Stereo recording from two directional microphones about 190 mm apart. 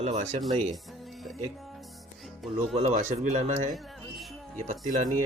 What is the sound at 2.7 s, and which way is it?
Speech, 35° right (ahead or behind).